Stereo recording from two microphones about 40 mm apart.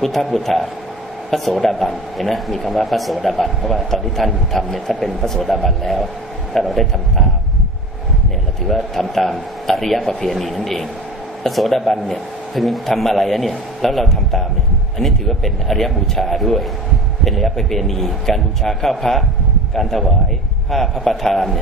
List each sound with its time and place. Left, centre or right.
0.0 s speech: centre
8.6 s a man's voice: centre